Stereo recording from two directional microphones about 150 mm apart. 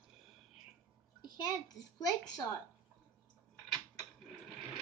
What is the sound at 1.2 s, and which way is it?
Speech, 30° left (ahead or behind).